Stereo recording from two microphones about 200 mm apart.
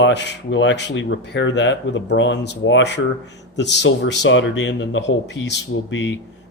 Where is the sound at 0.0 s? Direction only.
60° left (ahead or behind).